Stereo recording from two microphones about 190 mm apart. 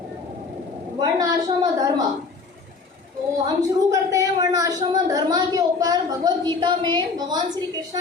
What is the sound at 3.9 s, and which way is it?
A woman's voice, 20° right (ahead or behind).